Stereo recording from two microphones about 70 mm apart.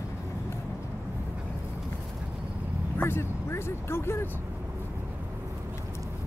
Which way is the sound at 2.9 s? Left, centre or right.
Left.